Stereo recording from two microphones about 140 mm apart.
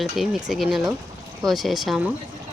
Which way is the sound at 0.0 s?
Centre (ahead or behind).